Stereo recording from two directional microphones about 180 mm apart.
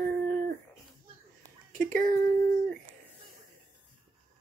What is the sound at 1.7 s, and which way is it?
Speech, 50° right (ahead or behind).